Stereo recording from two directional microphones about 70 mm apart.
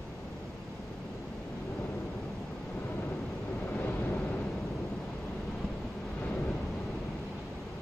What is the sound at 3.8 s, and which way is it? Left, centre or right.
Vehicle, left.